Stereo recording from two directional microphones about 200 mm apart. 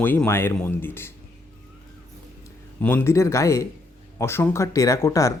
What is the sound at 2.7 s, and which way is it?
Speech, 10° left (ahead or behind).